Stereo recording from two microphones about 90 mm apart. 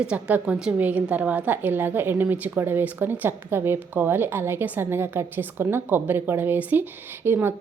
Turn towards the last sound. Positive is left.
turn(degrees=-25)  # may be behind; listen again after turning